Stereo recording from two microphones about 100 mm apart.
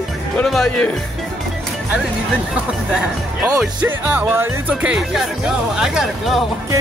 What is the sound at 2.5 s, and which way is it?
Speech, 10° right (ahead or behind).